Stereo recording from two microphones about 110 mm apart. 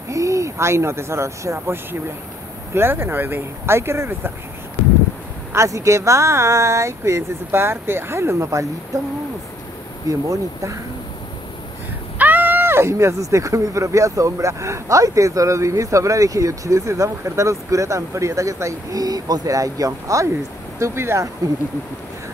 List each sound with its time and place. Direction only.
0.1 s speech: 30° right (ahead or behind)
5.5 s speech: 25° right (ahead or behind)
10.0 s speech: 30° right (ahead or behind)
12.2 s speech: 15° right (ahead or behind)